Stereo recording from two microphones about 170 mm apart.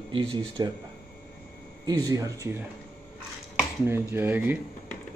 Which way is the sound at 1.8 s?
20° right (ahead or behind).